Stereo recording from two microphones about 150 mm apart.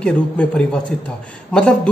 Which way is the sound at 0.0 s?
5° left (ahead or behind).